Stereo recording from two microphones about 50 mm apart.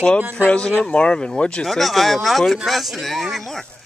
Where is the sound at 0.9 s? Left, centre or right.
Centre.